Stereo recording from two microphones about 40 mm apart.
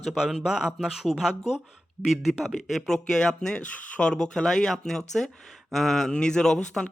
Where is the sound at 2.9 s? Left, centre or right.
Centre.